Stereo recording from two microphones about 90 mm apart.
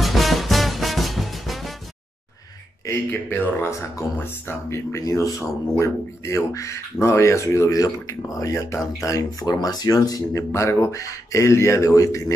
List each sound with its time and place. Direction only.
0.0 s music: centre (ahead or behind)
2.9 s speech: 25° left (ahead or behind)